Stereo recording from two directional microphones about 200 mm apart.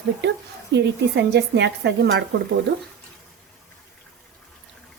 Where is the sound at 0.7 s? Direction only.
60° right (ahead or behind).